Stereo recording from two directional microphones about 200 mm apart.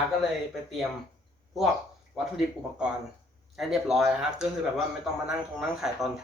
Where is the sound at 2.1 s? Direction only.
5° right (ahead or behind).